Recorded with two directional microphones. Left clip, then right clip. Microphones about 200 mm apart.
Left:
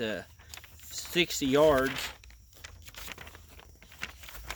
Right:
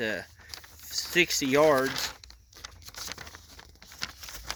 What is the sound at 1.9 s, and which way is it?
Speech, 35° right (ahead or behind).